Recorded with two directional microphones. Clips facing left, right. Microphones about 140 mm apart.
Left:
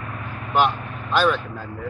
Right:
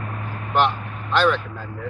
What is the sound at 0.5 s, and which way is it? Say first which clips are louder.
Vehicle: even; 10° left (ahead or behind).